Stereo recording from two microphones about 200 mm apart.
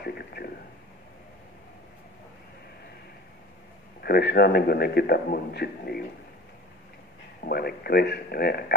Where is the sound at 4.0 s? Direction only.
50° left (ahead or behind).